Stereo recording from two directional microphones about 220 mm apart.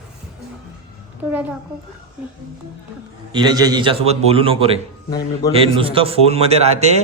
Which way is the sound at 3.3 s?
20° right (ahead or behind).